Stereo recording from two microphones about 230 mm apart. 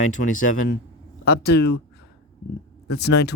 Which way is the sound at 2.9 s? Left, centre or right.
Left.